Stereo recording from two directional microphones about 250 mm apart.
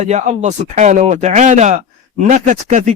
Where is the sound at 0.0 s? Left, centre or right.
Right.